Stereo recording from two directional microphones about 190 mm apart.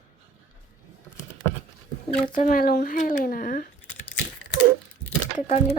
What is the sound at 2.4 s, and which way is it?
Speech, 50° left (ahead or behind).